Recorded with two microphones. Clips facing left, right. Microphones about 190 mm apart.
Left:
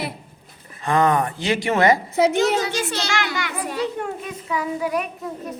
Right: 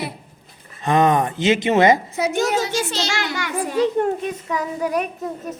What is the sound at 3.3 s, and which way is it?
A child's voice, 45° right (ahead or behind).